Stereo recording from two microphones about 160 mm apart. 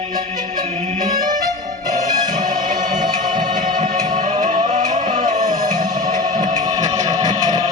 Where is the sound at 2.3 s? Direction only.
55° right (ahead or behind).